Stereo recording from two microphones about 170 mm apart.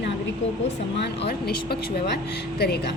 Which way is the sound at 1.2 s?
70° left (ahead or behind).